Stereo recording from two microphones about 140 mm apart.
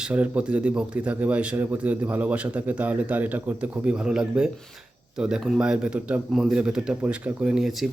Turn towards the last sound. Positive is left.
turn(degrees=0)  # may be behind; listen again after turning